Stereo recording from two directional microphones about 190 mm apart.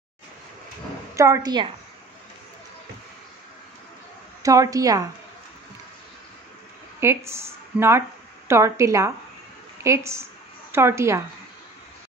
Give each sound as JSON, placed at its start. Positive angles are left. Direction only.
{"t": 1.1, "sound": "a woman's voice", "side_deg": -15}
{"t": 4.4, "sound": "a woman's voice", "side_deg": -15}
{"t": 7.0, "sound": "a woman's voice", "side_deg": -15}